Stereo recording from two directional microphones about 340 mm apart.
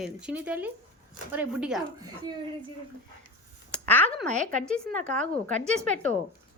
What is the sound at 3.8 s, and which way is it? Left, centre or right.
Speech, centre.